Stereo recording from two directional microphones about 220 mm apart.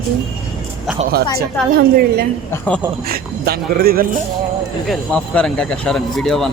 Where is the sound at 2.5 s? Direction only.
5° left (ahead or behind).